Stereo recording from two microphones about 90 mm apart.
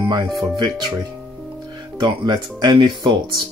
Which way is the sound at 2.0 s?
55° right (ahead or behind).